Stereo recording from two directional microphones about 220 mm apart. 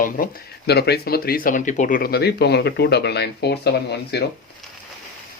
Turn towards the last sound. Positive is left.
turn(degrees=50)  # may be behind; listen again after turning